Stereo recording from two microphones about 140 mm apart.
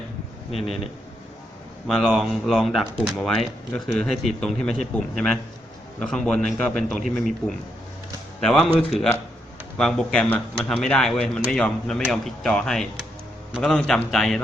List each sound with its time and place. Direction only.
0.5 s speech: 45° left (ahead or behind)
1.9 s a man's voice: centre (ahead or behind)